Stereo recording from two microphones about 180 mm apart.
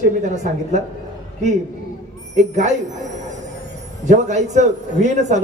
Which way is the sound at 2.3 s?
40° right (ahead or behind).